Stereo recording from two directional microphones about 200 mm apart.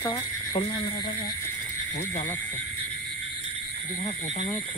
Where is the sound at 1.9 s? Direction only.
35° left (ahead or behind).